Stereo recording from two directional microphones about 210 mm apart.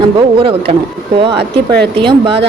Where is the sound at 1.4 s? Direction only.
50° right (ahead or behind).